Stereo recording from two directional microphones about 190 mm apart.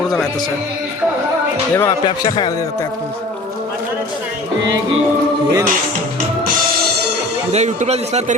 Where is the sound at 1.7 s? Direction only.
20° left (ahead or behind).